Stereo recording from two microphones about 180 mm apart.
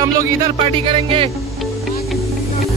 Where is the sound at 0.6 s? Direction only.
30° right (ahead or behind).